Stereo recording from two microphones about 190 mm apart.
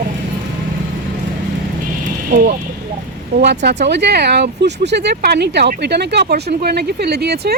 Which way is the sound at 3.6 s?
65° right (ahead or behind).